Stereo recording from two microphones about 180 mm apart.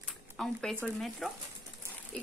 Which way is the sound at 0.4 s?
Centre (ahead or behind).